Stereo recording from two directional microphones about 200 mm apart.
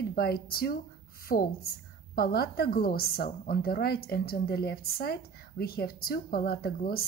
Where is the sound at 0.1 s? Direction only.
50° left (ahead or behind).